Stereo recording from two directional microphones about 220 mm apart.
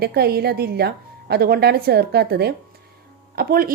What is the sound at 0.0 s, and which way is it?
A woman's voice, 45° right (ahead or behind).